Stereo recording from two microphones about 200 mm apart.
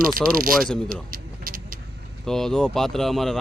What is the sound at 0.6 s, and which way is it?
Speech, 5° left (ahead or behind).